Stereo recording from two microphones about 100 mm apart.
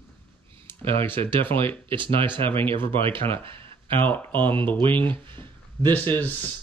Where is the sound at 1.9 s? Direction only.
55° right (ahead or behind).